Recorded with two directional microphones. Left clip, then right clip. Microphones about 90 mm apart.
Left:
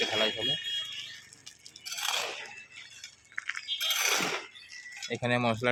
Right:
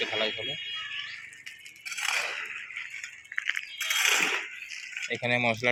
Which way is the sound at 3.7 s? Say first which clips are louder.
Right 3 dB; 40° right (ahead or behind).